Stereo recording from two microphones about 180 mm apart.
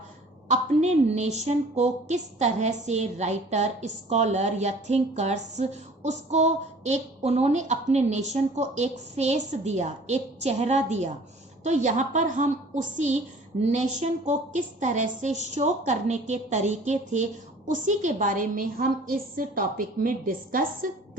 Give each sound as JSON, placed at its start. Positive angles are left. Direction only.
{"t": 0.5, "sound": "a woman's voice", "side_deg": -40}